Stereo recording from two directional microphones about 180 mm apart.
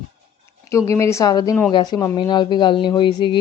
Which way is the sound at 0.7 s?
15° left (ahead or behind).